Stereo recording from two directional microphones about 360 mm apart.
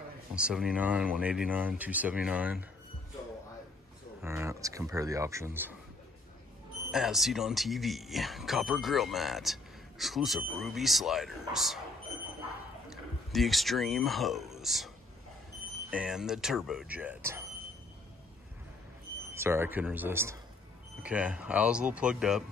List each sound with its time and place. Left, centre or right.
0.3 s speech: centre
4.2 s speech: centre
6.9 s speech: centre
13.3 s speech: centre
15.9 s speech: centre
19.3 s speech: centre